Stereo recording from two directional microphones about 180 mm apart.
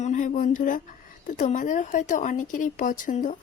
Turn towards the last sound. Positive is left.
turn(degrees=45)  # may be behind; listen again after turning